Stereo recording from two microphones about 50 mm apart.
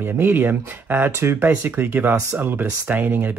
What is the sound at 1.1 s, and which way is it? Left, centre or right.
Speech, right.